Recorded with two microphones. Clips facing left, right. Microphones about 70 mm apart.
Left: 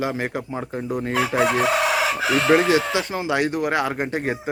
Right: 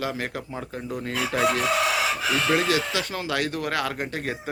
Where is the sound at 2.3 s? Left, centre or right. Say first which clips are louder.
Left 7 dB; left.